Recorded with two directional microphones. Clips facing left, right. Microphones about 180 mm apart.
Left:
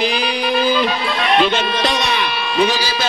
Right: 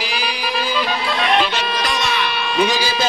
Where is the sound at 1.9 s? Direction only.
Centre (ahead or behind).